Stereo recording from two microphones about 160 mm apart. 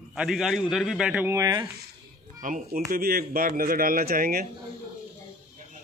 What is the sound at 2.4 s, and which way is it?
Speech, 55° right (ahead or behind).